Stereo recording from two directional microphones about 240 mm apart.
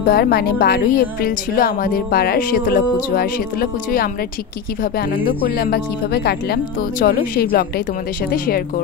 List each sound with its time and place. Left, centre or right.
0.0 s speech: left
4.9 s speech: left